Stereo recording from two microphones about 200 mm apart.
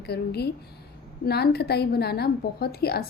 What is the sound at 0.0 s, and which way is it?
A woman's voice, 55° left (ahead or behind).